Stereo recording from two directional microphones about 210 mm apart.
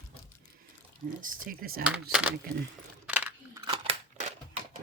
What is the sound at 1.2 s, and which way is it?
Speech, 40° right (ahead or behind).